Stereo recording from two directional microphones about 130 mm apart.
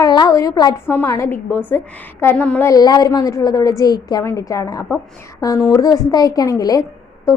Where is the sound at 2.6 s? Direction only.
30° left (ahead or behind).